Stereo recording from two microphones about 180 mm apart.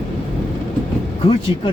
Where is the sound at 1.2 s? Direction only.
30° left (ahead or behind).